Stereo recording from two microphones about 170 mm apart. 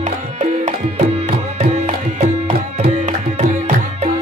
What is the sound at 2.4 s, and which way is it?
Tabla, 40° right (ahead or behind).